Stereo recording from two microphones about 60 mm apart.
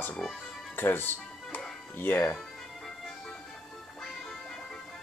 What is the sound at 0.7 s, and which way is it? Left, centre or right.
Music, left.